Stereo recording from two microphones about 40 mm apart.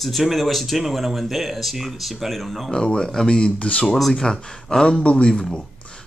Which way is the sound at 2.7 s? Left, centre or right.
Centre.